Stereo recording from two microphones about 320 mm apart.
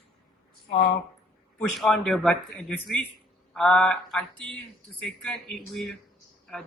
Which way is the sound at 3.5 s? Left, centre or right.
Centre.